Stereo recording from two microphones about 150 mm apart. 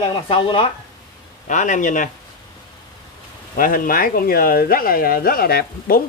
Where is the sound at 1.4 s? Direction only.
55° left (ahead or behind).